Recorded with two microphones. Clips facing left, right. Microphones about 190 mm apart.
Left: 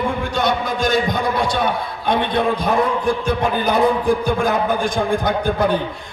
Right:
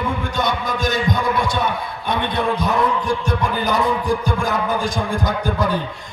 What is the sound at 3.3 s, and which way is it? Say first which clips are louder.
A man's voice: left 2 dB; 55° left (ahead or behind).